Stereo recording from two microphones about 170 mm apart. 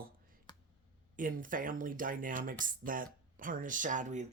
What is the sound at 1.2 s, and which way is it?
Speech, 50° right (ahead or behind).